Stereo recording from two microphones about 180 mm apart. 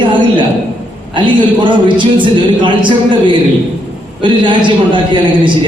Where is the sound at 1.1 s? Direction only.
25° right (ahead or behind).